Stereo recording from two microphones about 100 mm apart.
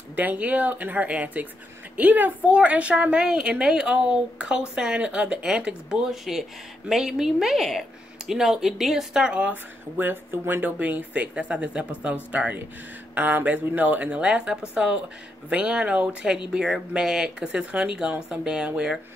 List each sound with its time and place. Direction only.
0.1 s a woman's voice: 15° right (ahead or behind)